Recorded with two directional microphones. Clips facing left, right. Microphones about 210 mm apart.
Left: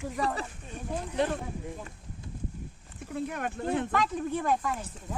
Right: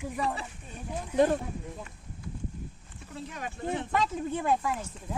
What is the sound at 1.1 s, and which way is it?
Speech, 45° right (ahead or behind).